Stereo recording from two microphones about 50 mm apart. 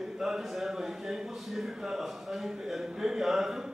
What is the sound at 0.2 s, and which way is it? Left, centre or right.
Speech, centre.